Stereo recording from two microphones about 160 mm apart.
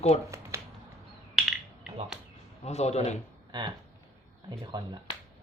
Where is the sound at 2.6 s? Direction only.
45° left (ahead or behind).